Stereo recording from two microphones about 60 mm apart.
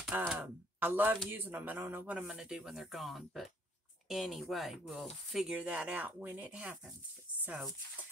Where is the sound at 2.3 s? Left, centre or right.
Centre.